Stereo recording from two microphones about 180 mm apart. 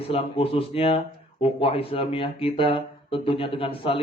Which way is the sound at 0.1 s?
30° left (ahead or behind).